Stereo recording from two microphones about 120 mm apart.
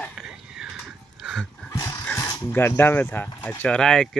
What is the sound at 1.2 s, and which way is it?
Dog, 5° right (ahead or behind).